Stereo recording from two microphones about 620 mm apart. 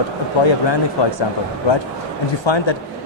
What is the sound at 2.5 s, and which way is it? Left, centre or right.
Speech, left.